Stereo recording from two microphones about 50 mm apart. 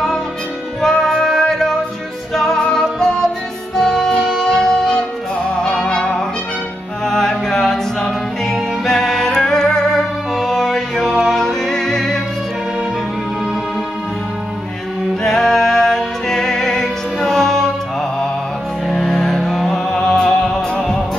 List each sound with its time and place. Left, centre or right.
0.7 s music: centre
8.8 s music: centre
15.2 s music: centre
18.9 s music: centre